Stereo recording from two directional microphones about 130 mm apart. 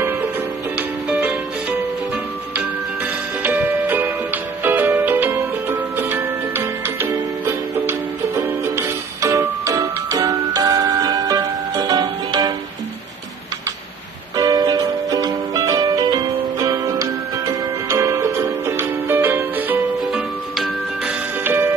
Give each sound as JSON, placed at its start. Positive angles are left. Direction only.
{"t": 0.7, "sound": "music", "side_deg": -15}
{"t": 3.4, "sound": "music", "side_deg": -15}
{"t": 14.3, "sound": "music", "side_deg": -30}
{"t": 20.0, "sound": "music", "side_deg": -5}
{"t": 21.5, "sound": "music", "side_deg": -15}